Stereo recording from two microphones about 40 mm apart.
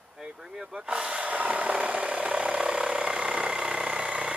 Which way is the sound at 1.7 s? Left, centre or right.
Right.